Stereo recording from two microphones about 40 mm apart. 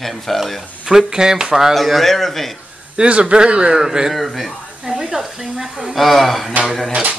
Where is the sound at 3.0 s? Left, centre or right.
Right.